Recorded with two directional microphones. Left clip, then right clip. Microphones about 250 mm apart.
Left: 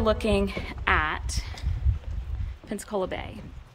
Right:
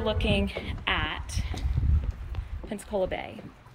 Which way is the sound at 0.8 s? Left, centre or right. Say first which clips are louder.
Left 5 dB; centre.